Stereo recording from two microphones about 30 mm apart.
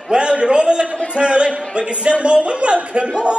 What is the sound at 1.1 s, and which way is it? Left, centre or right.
A man's voice, right.